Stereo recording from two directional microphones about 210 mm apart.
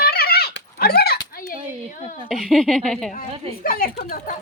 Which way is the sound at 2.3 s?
Centre (ahead or behind).